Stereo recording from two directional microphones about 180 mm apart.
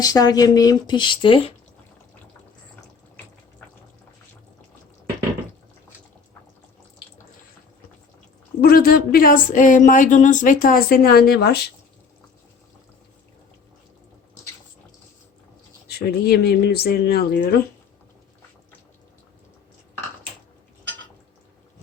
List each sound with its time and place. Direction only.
0.0 s speech: 20° left (ahead or behind)
8.6 s speech: 55° left (ahead or behind)
15.9 s speech: 60° left (ahead or behind)